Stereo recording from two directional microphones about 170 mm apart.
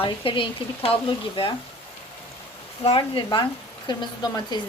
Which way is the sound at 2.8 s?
35° left (ahead or behind).